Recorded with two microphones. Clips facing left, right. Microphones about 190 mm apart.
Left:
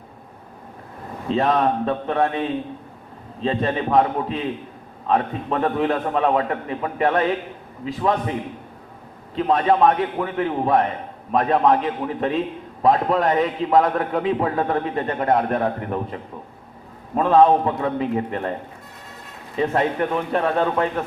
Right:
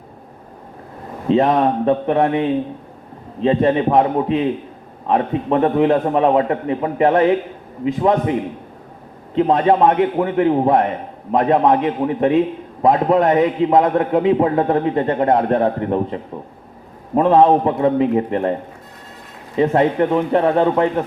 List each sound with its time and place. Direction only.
1.3 s a man's voice: 20° right (ahead or behind)
19.5 s a man's voice: 25° right (ahead or behind)